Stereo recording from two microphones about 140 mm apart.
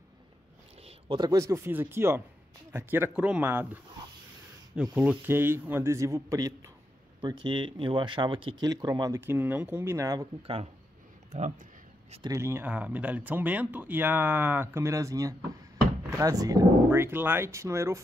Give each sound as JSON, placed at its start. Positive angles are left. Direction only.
{"t": 0.8, "sound": "a sound", "side_deg": -35}
{"t": 1.4, "sound": "speech", "side_deg": -20}
{"t": 4.9, "sound": "speech", "side_deg": -10}
{"t": 7.2, "sound": "speech", "side_deg": -35}
{"t": 9.2, "sound": "speech", "side_deg": -15}
{"t": 10.4, "sound": "speech", "side_deg": -45}
{"t": 11.3, "sound": "speech", "side_deg": -55}
{"t": 12.2, "sound": "speech", "side_deg": -20}